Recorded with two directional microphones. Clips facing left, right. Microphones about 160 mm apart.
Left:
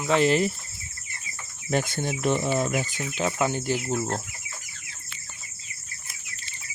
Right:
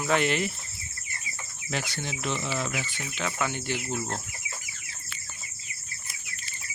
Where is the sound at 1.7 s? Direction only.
50° left (ahead or behind).